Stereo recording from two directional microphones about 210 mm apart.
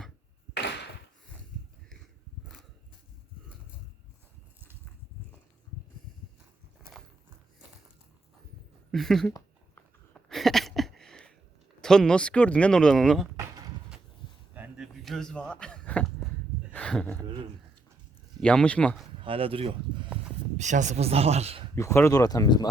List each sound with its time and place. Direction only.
0.5 s a sound: 55° left (ahead or behind)
8.9 s speech: centre (ahead or behind)
10.2 s a sound: centre (ahead or behind)
11.8 s speech: 5° left (ahead or behind)
14.5 s a sound: 5° right (ahead or behind)
17.2 s speech: 20° right (ahead or behind)
18.3 s speech: 5° left (ahead or behind)
19.2 s speech: 25° right (ahead or behind)
21.8 s speech: 10° left (ahead or behind)